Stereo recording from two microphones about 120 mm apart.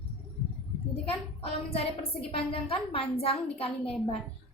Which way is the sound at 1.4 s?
55° left (ahead or behind).